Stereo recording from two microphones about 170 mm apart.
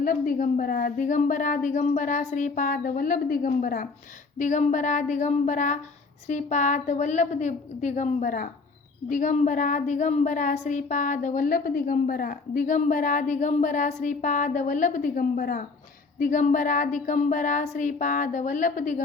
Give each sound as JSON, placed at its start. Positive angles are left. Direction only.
{"t": 0.0, "sound": "a woman's voice", "side_deg": 55}